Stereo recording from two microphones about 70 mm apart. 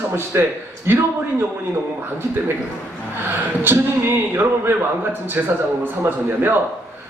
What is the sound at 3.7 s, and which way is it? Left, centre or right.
A man's voice, right.